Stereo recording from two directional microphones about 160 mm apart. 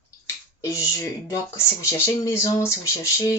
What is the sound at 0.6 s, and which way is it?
Speech, 20° left (ahead or behind).